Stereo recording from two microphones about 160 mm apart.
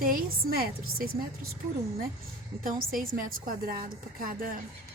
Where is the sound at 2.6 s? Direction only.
60° right (ahead or behind).